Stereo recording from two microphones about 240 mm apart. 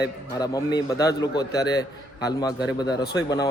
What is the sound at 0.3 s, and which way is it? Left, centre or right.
Speech, centre.